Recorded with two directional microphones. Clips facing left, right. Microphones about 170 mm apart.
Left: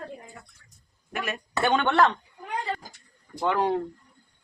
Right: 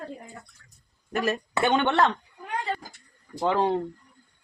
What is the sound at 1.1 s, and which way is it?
Speech, 40° right (ahead or behind).